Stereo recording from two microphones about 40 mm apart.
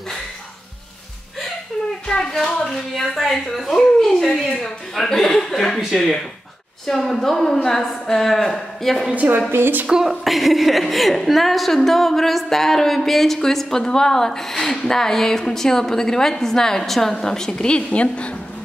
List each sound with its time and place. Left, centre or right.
2.6 s a woman's voice: centre
9.5 s speech: right
10.0 s a woman's voice: centre; by 18.3 s left